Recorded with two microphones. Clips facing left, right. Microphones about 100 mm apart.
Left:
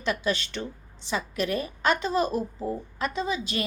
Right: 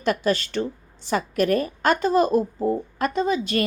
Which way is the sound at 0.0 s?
45° right (ahead or behind).